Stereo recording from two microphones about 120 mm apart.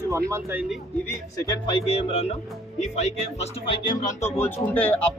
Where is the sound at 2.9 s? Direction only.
70° left (ahead or behind).